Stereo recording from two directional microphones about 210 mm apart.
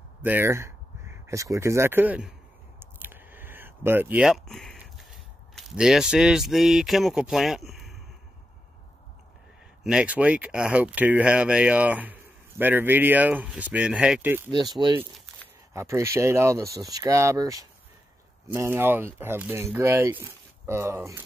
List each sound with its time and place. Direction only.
0.2 s speech: 10° right (ahead or behind)
2.8 s a sound: 10° right (ahead or behind)
9.8 s speech: 5° right (ahead or behind)
14.5 s speech: 20° right (ahead or behind)